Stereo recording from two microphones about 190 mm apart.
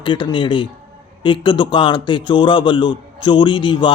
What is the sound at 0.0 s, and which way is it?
A man's voice, 25° left (ahead or behind).